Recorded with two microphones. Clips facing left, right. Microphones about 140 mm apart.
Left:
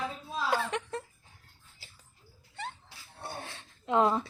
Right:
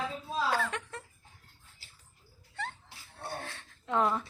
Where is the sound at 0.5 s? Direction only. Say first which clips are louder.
Left 2 dB; 20° left (ahead or behind).